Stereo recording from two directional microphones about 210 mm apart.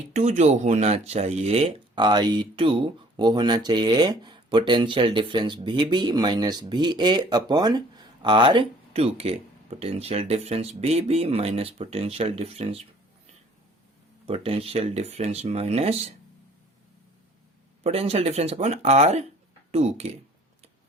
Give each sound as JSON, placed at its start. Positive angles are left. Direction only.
{"t": 0.1, "sound": "speech", "side_deg": -30}
{"t": 14.3, "sound": "speech", "side_deg": -30}
{"t": 17.8, "sound": "speech", "side_deg": -30}